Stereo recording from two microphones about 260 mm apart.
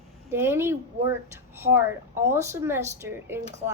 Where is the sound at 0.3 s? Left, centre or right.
Centre.